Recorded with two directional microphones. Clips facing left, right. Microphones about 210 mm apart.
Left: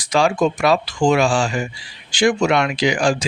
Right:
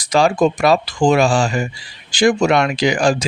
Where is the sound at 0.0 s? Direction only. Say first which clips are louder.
Right 3 dB; 40° right (ahead or behind).